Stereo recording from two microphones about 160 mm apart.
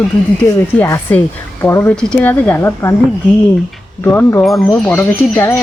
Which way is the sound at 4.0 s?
15° left (ahead or behind).